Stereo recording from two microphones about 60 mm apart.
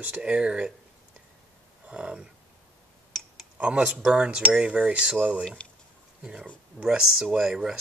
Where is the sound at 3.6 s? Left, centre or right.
Centre.